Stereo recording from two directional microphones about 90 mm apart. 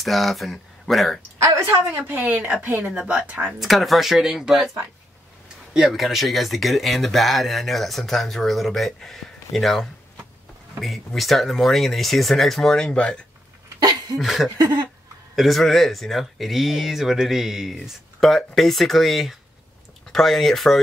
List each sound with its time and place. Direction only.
0.0 s speech: centre (ahead or behind)
1.4 s speech: 30° right (ahead or behind); by 3.5 s 15° right (ahead or behind)
3.5 s speech: centre (ahead or behind)
14.2 s speech: centre (ahead or behind)